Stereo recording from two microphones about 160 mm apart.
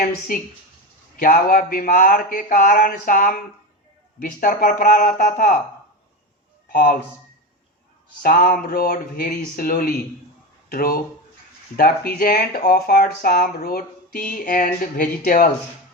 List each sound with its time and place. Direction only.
1.1 s speech: 60° left (ahead or behind)
6.7 s speech: 65° left (ahead or behind)
8.2 s speech: 60° left (ahead or behind)